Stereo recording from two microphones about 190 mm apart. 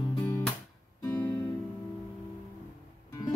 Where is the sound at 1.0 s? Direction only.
10° left (ahead or behind).